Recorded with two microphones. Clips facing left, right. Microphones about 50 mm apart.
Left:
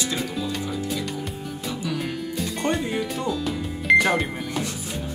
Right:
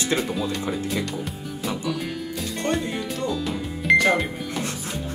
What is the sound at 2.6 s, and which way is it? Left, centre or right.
Speech, centre.